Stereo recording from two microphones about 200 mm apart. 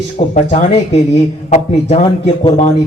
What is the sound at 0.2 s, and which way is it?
A man's voice, 30° left (ahead or behind).